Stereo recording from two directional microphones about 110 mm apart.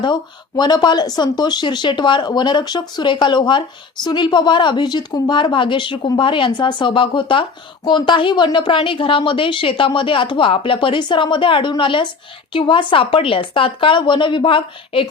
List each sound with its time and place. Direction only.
0.0 s a woman's voice: 40° left (ahead or behind)